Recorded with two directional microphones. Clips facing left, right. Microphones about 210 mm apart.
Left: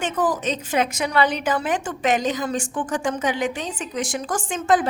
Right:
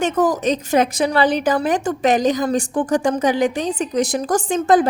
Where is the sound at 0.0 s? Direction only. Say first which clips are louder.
Right 5 dB; 40° right (ahead or behind).